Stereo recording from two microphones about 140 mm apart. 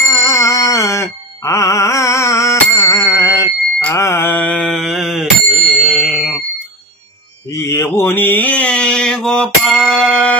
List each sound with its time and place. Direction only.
0.0 s music: 20° left (ahead or behind)
3.9 s mantra: 20° left (ahead or behind); by 6.4 s 5° right (ahead or behind)
7.5 s mantra: 20° left (ahead or behind)